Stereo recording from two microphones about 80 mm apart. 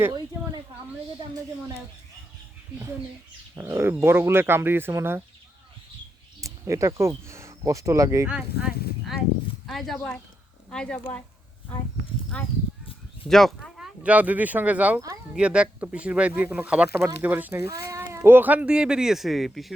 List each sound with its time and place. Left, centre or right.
3.5 s speech: right
6.4 s speech: right
8.3 s speech: centre
12.3 s speech: centre
13.2 s speech: centre
14.0 s speech: centre